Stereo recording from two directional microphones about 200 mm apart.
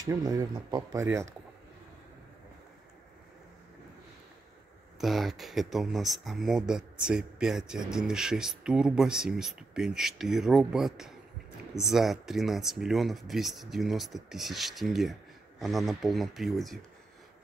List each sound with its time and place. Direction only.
0.0 s speech: 20° right (ahead or behind)
5.0 s speech: centre (ahead or behind)